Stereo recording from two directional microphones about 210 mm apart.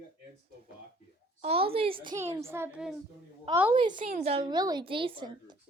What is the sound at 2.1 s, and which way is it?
A woman's voice, 15° right (ahead or behind).